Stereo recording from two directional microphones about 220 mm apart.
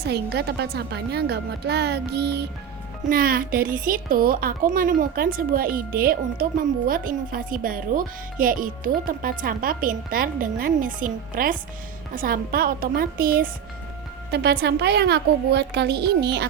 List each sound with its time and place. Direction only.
0.0 s a woman's voice: 45° right (ahead or behind)